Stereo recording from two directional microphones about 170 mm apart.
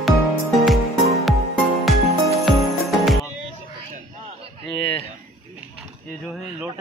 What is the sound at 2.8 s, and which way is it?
Music, centre (ahead or behind).